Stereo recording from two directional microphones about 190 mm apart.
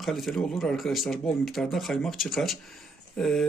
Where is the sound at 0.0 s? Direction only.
Centre (ahead or behind).